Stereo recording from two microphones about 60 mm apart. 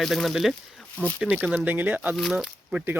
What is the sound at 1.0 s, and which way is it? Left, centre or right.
Speech, left.